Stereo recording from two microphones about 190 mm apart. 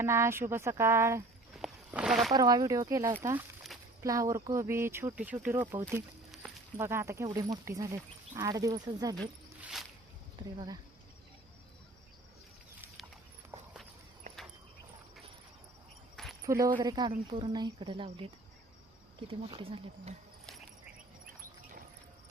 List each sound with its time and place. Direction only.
0.0 s speech: 15° right (ahead or behind)
1.5 s a sound: 5° right (ahead or behind)
2.3 s speech: 20° right (ahead or behind)
6.7 s speech: 15° right (ahead or behind)
9.6 s a sound: 5° right (ahead or behind)
10.3 s speech: 25° right (ahead or behind)
13.5 s walk: 15° right (ahead or behind)
16.1 s keys jangling: centre (ahead or behind)
16.5 s speech: 20° right (ahead or behind)
19.3 s speech: 30° right (ahead or behind)